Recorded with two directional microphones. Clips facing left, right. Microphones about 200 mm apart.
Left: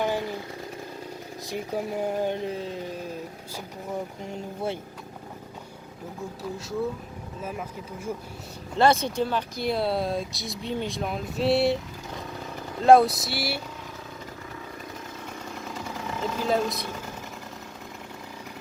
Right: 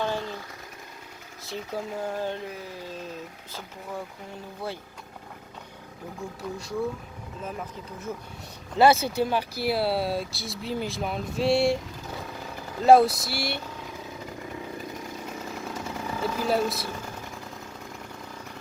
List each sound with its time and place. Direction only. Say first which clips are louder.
0.0 s a sound: left 2 dB; 15° left (ahead or behind)
1.5 s speech: left 3 dB; 15° left (ahead or behind)
8.7 s speech: right 2 dB; 5° right (ahead or behind)
12.8 s speech: even; centre (ahead or behind)
16.2 s speech: even; 10° right (ahead or behind)